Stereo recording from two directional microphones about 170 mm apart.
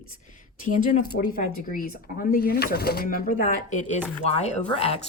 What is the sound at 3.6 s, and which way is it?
A woman's voice, 45° left (ahead or behind).